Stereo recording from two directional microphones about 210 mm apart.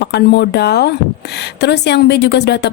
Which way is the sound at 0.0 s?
50° left (ahead or behind).